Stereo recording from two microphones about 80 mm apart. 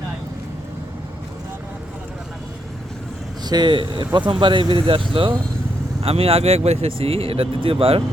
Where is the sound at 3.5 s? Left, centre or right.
Right.